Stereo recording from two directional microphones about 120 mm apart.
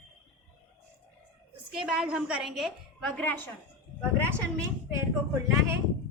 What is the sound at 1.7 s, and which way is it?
A woman's voice, 5° right (ahead or behind).